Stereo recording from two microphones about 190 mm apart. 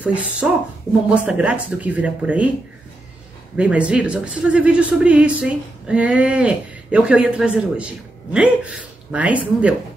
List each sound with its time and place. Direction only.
0.0 s speech: 5° right (ahead or behind)
3.5 s speech: 5° right (ahead or behind)